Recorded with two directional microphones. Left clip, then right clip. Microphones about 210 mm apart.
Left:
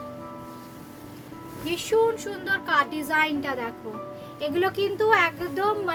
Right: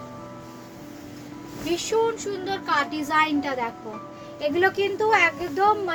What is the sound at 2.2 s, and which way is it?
A woman's voice, 20° left (ahead or behind).